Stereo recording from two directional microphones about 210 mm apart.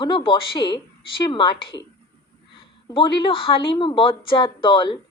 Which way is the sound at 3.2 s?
25° left (ahead or behind).